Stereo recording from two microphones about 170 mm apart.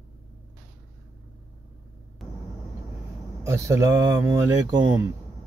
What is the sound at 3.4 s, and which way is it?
Speech, 15° right (ahead or behind).